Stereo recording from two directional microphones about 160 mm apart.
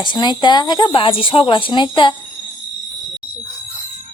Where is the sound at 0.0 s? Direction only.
30° left (ahead or behind).